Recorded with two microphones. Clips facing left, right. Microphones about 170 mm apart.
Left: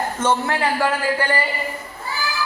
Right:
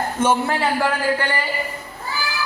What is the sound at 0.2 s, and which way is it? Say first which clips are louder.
Speech: right 2 dB; 10° right (ahead or behind).